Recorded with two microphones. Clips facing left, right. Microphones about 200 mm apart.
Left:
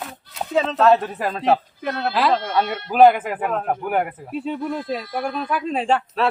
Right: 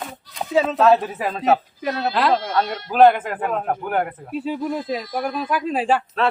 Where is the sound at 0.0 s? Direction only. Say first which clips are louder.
Even; centre (ahead or behind).